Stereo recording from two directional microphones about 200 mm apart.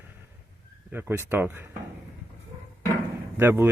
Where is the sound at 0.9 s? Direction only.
10° right (ahead or behind).